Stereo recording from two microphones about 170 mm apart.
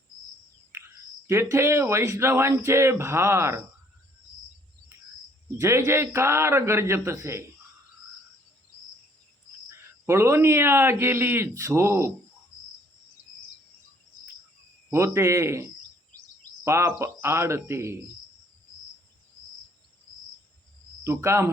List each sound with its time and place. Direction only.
1.3 s speech: 15° right (ahead or behind)
5.5 s speech: 15° right (ahead or behind)
9.6 s speech: 15° right (ahead or behind)
14.8 s speech: 15° right (ahead or behind)
21.0 s speech: 15° right (ahead or behind)